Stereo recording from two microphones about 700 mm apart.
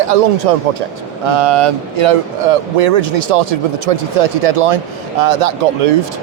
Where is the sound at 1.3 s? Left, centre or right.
Right.